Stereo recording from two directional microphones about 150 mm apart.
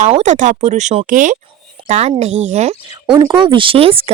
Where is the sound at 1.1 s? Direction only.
60° right (ahead or behind).